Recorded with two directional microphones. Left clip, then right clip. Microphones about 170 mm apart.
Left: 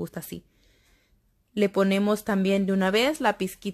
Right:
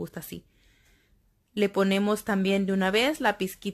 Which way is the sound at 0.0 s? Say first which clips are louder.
Left 2 dB; 20° left (ahead or behind).